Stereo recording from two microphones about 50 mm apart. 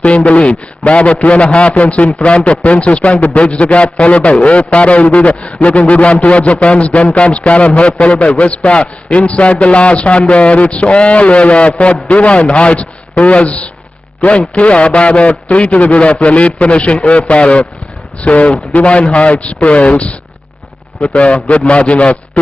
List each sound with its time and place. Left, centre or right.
0.0 s a man's voice: left